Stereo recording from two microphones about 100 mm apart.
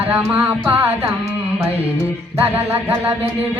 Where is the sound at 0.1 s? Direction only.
10° right (ahead or behind).